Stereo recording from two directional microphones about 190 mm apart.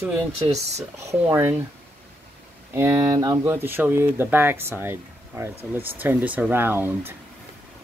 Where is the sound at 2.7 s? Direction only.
15° right (ahead or behind).